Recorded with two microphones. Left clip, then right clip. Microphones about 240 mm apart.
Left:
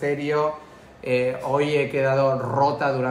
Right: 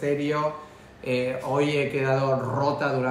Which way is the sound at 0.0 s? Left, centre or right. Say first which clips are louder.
Left 3 dB; centre.